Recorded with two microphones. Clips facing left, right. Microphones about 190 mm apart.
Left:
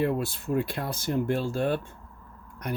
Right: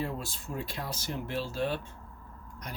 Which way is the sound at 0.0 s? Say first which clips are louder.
Left 9 dB; 60° left (ahead or behind).